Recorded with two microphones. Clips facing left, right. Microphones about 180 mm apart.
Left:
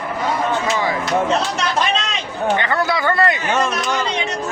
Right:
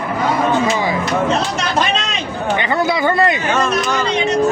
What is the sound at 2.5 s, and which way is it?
Speech, 15° right (ahead or behind).